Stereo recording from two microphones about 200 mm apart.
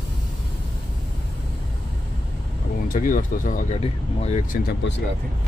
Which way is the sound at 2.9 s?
45° left (ahead or behind).